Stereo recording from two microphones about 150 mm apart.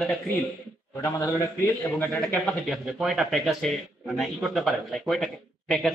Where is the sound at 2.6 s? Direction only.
Centre (ahead or behind).